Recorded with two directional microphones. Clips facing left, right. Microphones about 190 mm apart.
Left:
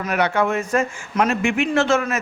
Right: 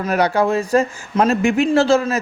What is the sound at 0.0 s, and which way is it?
Speech, 35° right (ahead or behind).